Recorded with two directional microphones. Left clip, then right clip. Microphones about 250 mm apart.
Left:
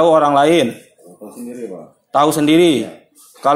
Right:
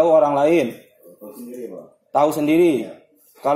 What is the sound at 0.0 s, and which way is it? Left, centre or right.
Speech, left.